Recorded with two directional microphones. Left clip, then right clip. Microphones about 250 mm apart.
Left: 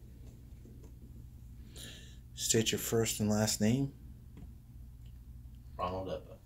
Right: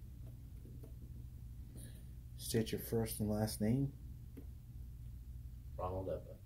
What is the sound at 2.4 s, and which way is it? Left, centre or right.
Speech, left.